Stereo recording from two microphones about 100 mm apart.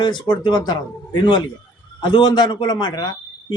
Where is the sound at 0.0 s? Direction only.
45° left (ahead or behind).